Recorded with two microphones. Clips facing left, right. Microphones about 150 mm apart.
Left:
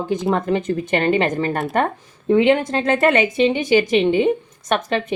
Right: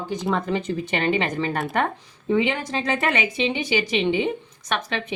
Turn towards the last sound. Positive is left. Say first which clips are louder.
# left 7 dB
turn(degrees=50)  # may be behind; listen again after turning